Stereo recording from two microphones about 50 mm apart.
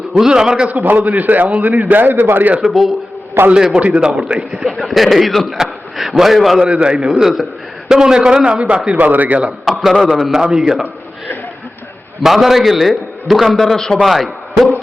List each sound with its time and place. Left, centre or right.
0.2 s a man's voice: centre
0.9 s a man's voice: right
2.6 s a man's voice: centre
3.4 s a man's voice: right
3.8 s a man's voice: right
4.6 s a man's voice: centre
6.8 s a man's voice: right
7.2 s a man's voice: centre
8.5 s a man's voice: right
9.6 s a man's voice: centre
12.2 s a man's voice: centre
14.0 s a man's voice: centre